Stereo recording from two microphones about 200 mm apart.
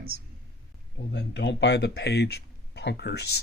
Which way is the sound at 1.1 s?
60° left (ahead or behind).